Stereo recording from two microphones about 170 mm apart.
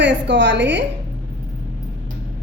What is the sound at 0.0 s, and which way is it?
Speech, 90° right.